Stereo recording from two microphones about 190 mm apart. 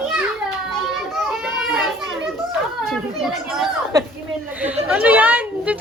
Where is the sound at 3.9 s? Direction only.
20° right (ahead or behind).